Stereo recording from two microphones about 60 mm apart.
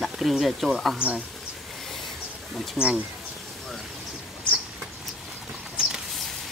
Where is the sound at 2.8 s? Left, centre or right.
Centre.